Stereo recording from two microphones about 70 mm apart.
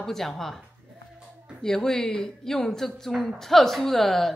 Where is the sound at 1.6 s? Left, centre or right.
Centre.